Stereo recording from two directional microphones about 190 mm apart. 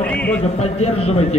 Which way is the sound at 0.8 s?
35° left (ahead or behind).